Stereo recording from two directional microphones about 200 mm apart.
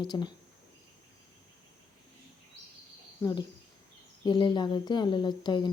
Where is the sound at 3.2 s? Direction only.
20° left (ahead or behind).